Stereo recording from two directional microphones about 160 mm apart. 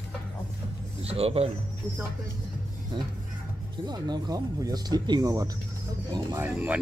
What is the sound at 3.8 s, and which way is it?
Speech, 25° right (ahead or behind).